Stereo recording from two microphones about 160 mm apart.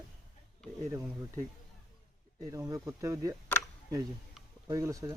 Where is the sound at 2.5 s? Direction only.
20° right (ahead or behind).